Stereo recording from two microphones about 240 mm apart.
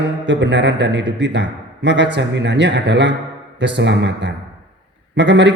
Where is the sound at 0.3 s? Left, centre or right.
Right.